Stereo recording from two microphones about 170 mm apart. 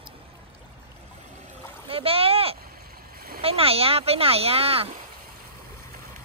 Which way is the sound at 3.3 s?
35° right (ahead or behind).